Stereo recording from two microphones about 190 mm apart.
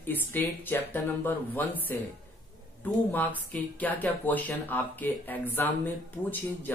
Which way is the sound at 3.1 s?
10° left (ahead or behind).